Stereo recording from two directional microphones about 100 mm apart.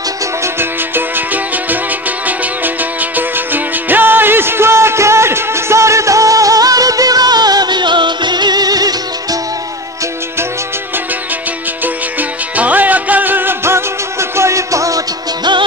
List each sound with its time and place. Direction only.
0.4 s music: 20° right (ahead or behind); by 9.4 s 40° right (ahead or behind)
11.8 s music: 15° right (ahead or behind); by 15.5 s 35° right (ahead or behind)